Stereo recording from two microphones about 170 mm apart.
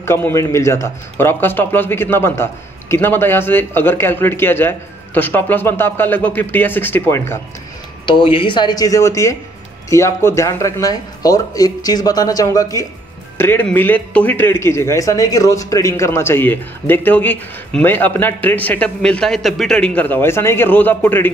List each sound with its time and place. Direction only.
0.0 s a man's voice: 15° left (ahead or behind)
8.0 s a man's voice: 30° left (ahead or behind); by 21.3 s 10° left (ahead or behind)